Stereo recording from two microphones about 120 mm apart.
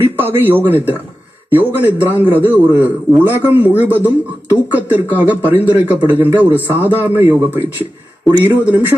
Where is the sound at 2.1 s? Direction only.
15° right (ahead or behind).